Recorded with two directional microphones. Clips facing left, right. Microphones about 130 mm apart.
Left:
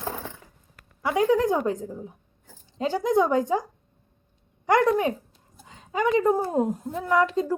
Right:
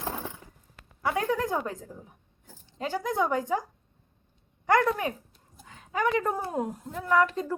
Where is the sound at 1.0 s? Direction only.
15° left (ahead or behind).